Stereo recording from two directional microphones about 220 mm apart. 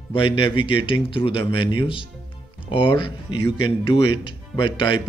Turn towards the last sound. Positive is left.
turn(degrees=20)  # may be behind; listen again after turning